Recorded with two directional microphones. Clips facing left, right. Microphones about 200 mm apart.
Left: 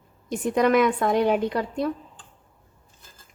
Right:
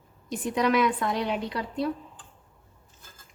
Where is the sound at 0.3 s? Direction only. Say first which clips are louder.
Left 5 dB; 50° left (ahead or behind).